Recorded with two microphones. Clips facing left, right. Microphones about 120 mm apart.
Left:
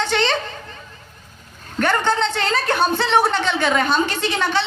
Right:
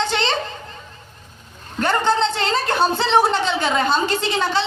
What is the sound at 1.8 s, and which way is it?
A woman's voice, 30° right (ahead or behind).